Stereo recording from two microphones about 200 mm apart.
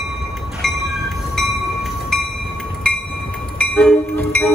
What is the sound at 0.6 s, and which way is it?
Train, centre (ahead or behind).